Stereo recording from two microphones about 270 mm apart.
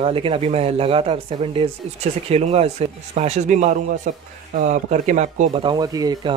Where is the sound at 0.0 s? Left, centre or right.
Centre.